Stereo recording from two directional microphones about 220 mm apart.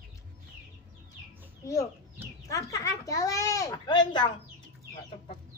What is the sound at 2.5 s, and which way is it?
Speech, 15° left (ahead or behind).